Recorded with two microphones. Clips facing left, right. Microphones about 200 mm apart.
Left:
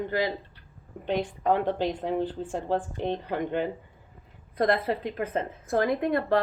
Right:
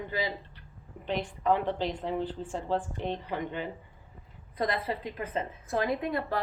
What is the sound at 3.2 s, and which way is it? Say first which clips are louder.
A woman's voice: left 6 dB; 60° left (ahead or behind).